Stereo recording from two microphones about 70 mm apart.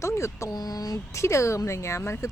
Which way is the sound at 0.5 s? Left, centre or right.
Left.